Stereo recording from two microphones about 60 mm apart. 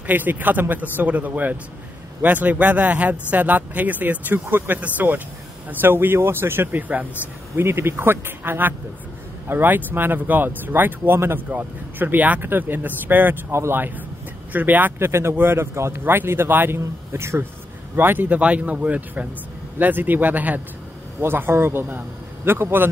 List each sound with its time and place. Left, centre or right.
0.0 s speech: right
7.5 s speech: right
13.5 s a man's voice: right
14.5 s a man's voice: right
16.0 s speech: right
17.9 s speech: right
21.2 s speech: right